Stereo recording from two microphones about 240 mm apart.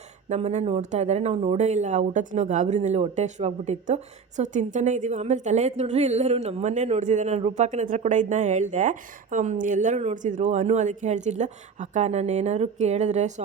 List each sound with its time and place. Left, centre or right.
0.3 s speech: right